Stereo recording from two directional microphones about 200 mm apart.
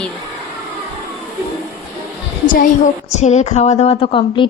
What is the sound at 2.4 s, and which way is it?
A woman's voice, 45° left (ahead or behind).